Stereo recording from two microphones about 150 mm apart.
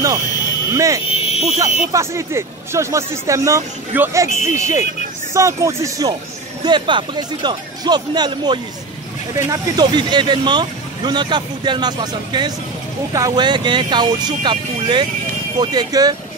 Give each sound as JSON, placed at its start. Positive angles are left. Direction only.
{"t": 0.7, "sound": "speech", "side_deg": -20}
{"t": 1.0, "sound": "fire alarm", "side_deg": 40}
{"t": 1.6, "sound": "speech", "side_deg": -20}
{"t": 4.3, "sound": "speech", "side_deg": 50}
{"t": 5.3, "sound": "speech", "side_deg": -20}